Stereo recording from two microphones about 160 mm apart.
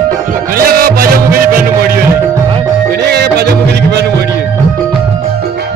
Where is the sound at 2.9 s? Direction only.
90° right.